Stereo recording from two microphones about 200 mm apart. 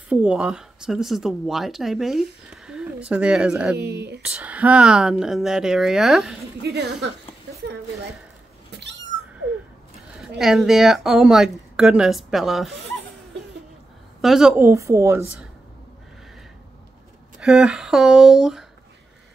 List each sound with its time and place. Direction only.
0.1 s speech: 5° right (ahead or behind)
3.7 s speech: 55° right (ahead or behind)
4.2 s speech: 5° right (ahead or behind)
6.6 s speech: 55° right (ahead or behind)
10.2 s speech: centre (ahead or behind)
14.2 s speech: centre (ahead or behind)
17.4 s speech: 5° right (ahead or behind)